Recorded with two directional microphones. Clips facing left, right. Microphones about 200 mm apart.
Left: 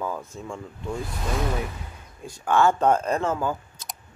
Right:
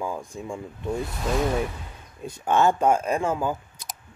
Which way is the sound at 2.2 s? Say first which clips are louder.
Even; 20° right (ahead or behind).